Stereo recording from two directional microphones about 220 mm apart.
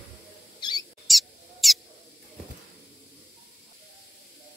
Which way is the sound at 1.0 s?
Centre (ahead or behind).